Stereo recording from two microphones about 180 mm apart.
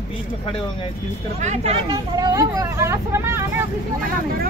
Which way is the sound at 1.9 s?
20° right (ahead or behind).